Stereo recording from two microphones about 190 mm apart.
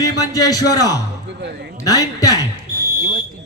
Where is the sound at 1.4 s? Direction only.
60° right (ahead or behind).